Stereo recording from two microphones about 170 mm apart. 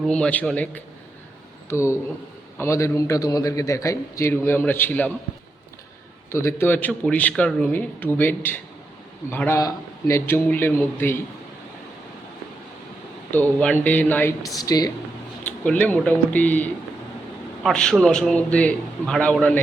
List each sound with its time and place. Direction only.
0.1 s a man's voice: 5° left (ahead or behind)
6.3 s a man's voice: 15° left (ahead or behind)
13.3 s a man's voice: 10° left (ahead or behind)
14.4 s speech: 20° left (ahead or behind)
15.4 s a man's voice: 10° left (ahead or behind)